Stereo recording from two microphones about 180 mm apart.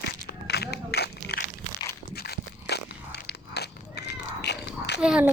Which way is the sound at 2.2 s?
65° left (ahead or behind).